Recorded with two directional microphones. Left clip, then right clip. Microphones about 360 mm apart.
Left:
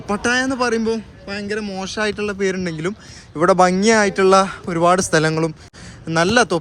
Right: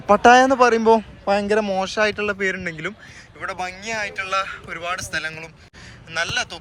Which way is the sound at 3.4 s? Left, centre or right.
Centre.